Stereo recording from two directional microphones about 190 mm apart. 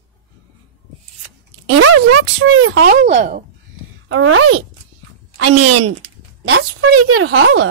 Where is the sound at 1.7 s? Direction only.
90° right.